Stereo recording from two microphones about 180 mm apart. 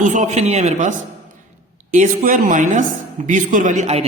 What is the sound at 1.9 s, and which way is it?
Speech, 50° right (ahead or behind).